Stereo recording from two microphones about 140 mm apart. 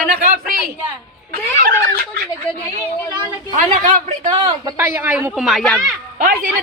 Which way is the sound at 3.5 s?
65° right (ahead or behind).